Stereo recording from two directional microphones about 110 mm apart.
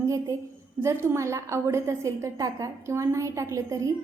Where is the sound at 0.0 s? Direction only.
30° right (ahead or behind).